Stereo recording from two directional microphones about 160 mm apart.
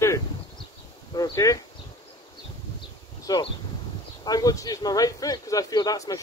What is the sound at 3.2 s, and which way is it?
Speech, 25° left (ahead or behind).